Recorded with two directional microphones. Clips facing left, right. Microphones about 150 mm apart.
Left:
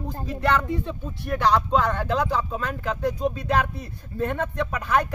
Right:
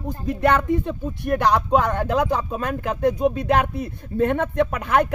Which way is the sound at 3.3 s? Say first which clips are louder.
Right 4 dB; 60° right (ahead or behind).